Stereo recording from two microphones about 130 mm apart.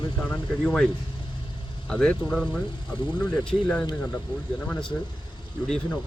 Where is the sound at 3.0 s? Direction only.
35° left (ahead or behind).